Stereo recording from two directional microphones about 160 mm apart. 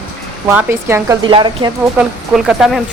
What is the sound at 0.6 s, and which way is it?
Speech, 15° right (ahead or behind).